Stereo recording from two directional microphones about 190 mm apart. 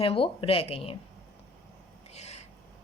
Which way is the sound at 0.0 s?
30° left (ahead or behind).